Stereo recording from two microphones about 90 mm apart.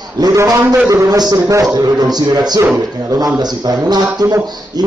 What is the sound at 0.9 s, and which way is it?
Speech, 40° right (ahead or behind).